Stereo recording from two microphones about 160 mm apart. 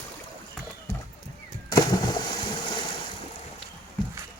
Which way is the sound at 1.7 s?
25° left (ahead or behind).